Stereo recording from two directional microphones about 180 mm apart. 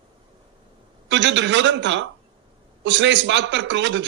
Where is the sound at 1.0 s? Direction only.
85° right.